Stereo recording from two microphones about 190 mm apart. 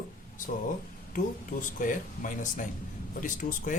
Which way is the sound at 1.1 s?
45° left (ahead or behind).